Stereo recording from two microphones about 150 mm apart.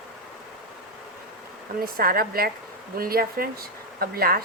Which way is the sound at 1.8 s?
80° right.